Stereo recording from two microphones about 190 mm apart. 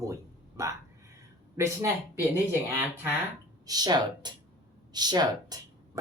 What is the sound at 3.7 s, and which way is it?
Speech, 20° right (ahead or behind).